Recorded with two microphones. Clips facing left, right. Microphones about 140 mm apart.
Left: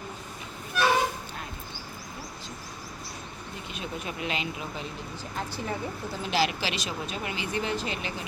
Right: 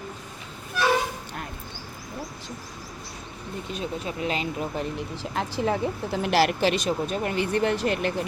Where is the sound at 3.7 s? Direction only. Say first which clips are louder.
Right 5 dB; 35° right (ahead or behind); by 4.9 s 50° right (ahead or behind).